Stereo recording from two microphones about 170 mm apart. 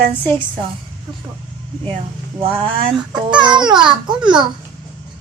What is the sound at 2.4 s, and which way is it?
Speech, 30° right (ahead or behind).